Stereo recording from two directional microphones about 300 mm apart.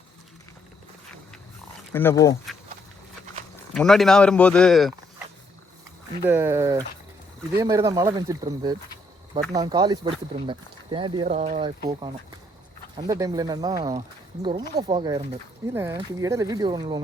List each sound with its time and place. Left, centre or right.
1.9 s speech: centre
3.8 s speech: centre
6.2 s speech: centre